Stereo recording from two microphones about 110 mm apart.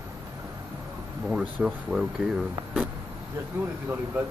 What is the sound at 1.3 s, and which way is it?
Speech, 5° right (ahead or behind).